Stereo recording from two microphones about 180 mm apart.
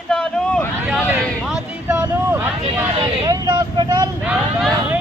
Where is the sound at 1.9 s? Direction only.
15° right (ahead or behind).